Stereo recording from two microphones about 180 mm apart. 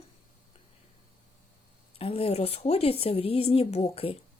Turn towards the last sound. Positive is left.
turn(degrees=35)  # may be behind; listen again after turning